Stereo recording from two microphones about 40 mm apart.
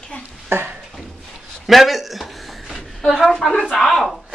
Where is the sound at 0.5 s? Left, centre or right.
Right.